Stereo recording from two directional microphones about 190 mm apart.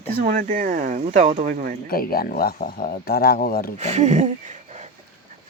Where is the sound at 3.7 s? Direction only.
35° right (ahead or behind).